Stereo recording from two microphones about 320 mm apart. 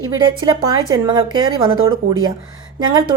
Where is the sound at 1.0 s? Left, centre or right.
Centre.